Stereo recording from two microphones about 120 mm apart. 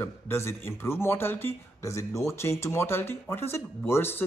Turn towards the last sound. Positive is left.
turn(degrees=20)  # may be behind; listen again after turning